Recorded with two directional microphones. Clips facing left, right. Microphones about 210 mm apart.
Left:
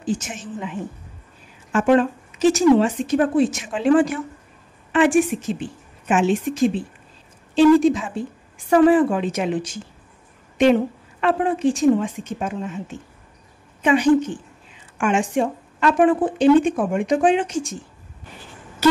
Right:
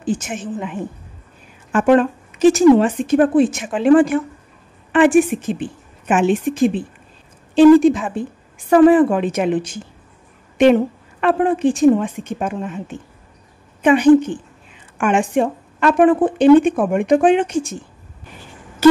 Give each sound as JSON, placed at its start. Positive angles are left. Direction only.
{"t": 0.0, "sound": "speech", "side_deg": -55}
{"t": 13.8, "sound": "speech", "side_deg": -55}